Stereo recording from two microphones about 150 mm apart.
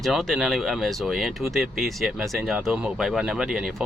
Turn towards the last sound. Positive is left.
turn(degrees=-5)  # may be behind; listen again after turning